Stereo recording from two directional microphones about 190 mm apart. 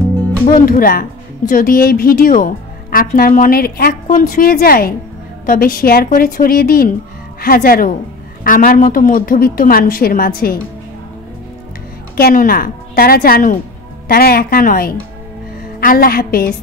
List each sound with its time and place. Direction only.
0.5 s a woman's voice: 45° left (ahead or behind)
12.2 s a woman's voice: 50° left (ahead or behind)